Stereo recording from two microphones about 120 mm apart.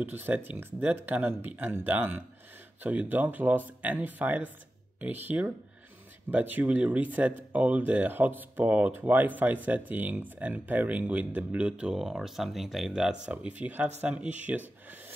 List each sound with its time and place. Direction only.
0.0 s speech: 15° right (ahead or behind)